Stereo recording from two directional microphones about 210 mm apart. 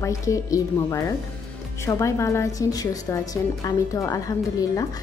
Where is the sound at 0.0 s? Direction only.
15° left (ahead or behind).